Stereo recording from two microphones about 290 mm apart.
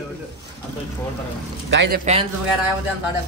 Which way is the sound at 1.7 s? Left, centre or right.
Right.